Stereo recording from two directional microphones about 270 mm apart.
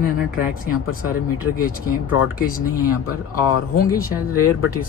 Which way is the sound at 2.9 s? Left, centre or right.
Left.